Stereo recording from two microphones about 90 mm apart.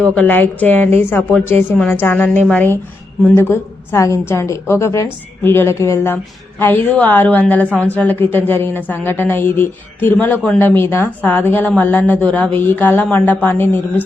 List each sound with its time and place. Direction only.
0.0 s a woman's voice: 20° left (ahead or behind)
3.2 s a woman's voice: 30° left (ahead or behind)
6.9 s a woman's voice: 20° left (ahead or behind)